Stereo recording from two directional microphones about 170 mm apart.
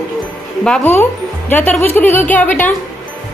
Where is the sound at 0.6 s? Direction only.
10° left (ahead or behind).